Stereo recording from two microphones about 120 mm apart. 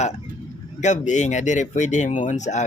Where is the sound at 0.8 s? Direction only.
85° left.